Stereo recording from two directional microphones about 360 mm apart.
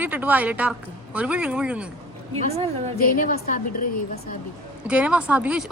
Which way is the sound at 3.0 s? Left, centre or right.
Left.